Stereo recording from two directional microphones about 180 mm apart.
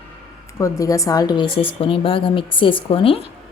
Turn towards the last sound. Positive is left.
turn(degrees=30)  # may be behind; listen again after turning